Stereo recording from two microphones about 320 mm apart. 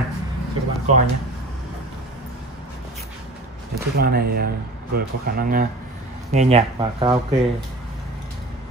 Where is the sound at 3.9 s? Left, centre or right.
Right.